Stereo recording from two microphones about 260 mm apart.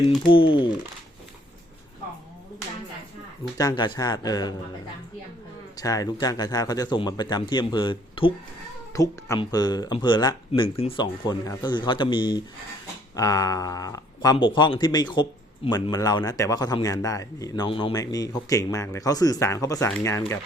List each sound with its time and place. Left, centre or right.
0.3 s speech: centre
3.6 s speech: centre
5.7 s speech: centre